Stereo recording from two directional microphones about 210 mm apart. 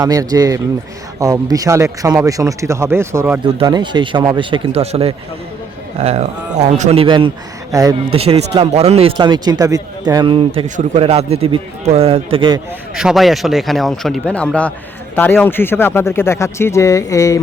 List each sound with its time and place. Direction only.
0.0 s a man's voice: 15° right (ahead or behind)
8.1 s a man's voice: 30° right (ahead or behind)
12.9 s speech: centre (ahead or behind); by 17.4 s 15° left (ahead or behind)